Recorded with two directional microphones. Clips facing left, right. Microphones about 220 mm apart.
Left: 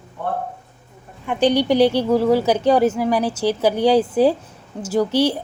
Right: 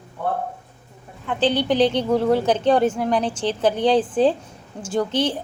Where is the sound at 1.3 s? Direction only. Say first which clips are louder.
Left 3 dB; 15° left (ahead or behind).